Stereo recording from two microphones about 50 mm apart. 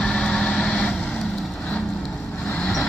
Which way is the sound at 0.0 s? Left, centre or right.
Centre.